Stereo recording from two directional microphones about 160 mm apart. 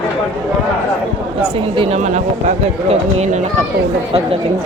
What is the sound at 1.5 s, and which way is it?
Speech, 35° right (ahead or behind).